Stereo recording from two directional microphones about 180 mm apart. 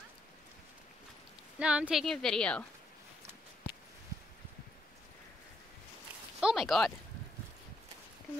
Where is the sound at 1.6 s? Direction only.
5° right (ahead or behind).